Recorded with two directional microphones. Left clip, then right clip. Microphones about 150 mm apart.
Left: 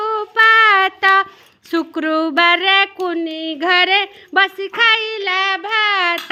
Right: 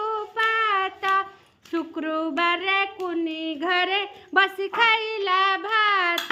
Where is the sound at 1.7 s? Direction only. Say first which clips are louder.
Left 9 dB; 50° left (ahead or behind).